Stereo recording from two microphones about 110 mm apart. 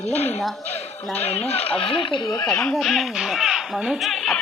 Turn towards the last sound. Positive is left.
turn(degrees=0)  # may be behind; listen again after turning